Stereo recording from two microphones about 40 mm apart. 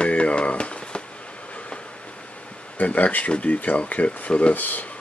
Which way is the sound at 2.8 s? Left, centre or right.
Left.